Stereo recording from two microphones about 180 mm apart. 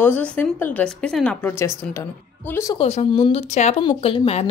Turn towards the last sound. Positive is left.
turn(degrees=30)  # may be behind; listen again after turning